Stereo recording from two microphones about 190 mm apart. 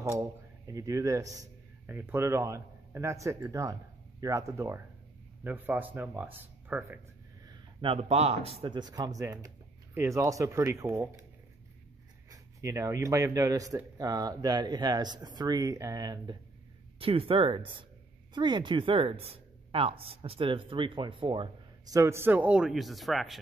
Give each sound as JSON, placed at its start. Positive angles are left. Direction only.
{"t": 0.7, "sound": "a man's voice", "side_deg": -15}
{"t": 7.4, "sound": "a woman's voice", "side_deg": -25}
{"t": 12.3, "sound": "a woman's voice", "side_deg": -15}